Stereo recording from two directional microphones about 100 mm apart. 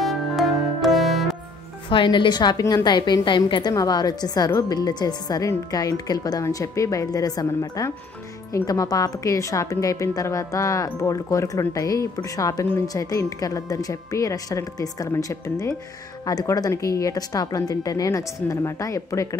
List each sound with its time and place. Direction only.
0.0 s music: centre (ahead or behind)
1.9 s a woman's voice: 55° left (ahead or behind)
3.7 s a woman's voice: 40° left (ahead or behind)